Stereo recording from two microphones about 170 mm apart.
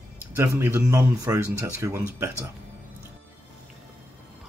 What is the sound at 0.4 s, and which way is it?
A man's voice, 15° right (ahead or behind).